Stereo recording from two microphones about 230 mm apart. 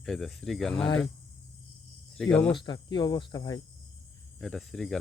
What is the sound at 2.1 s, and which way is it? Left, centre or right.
Cricket, centre.